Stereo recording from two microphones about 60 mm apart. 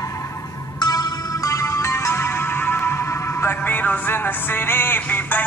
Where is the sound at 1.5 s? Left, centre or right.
Left.